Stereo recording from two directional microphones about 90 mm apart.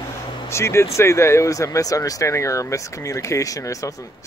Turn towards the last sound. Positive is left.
turn(degrees=40)  # may be behind; listen again after turning